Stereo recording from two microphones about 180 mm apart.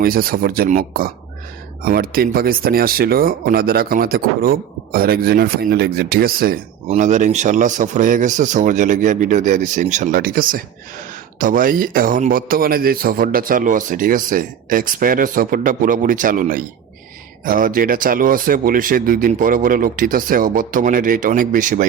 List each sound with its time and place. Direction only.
0.0 s a man's voice: 55° right (ahead or behind)
6.9 s a man's voice: 40° right (ahead or behind)